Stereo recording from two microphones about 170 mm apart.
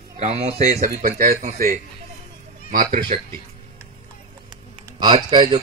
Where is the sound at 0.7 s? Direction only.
50° right (ahead or behind).